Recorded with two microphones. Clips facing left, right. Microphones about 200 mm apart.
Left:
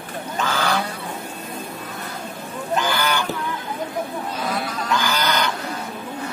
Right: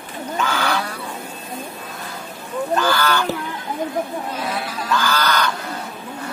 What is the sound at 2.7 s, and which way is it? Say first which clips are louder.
Goose: right 2 dB; 15° left (ahead or behind).